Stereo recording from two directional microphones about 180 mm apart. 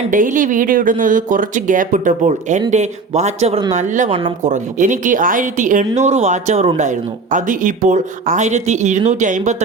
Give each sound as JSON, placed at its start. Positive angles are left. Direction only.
{"t": 0.1, "sound": "speech", "side_deg": -50}